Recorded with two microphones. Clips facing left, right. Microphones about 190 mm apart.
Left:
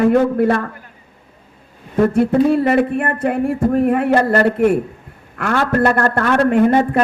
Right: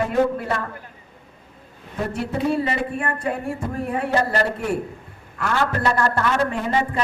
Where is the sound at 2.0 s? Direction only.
55° left (ahead or behind).